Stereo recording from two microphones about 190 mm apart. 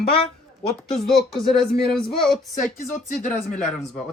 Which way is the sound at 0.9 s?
Centre (ahead or behind).